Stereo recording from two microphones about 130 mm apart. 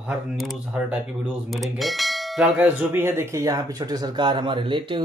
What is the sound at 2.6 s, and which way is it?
Speech, 15° right (ahead or behind).